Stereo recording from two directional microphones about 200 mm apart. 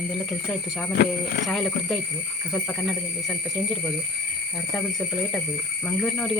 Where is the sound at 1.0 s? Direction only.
50° left (ahead or behind).